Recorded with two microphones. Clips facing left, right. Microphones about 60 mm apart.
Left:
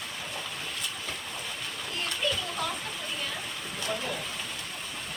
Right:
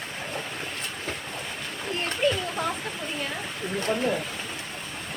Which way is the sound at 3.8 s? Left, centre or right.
Right.